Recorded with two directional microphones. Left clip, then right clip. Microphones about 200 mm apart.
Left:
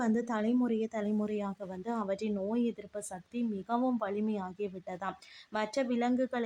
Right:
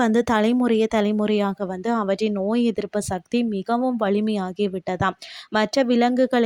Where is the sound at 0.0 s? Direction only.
45° right (ahead or behind).